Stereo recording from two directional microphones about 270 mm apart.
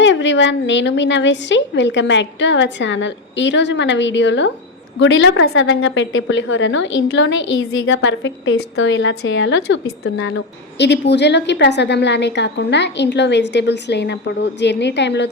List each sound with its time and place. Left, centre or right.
0.0 s a woman's voice: left
7.3 s a woman's voice: left
7.9 s a woman's voice: left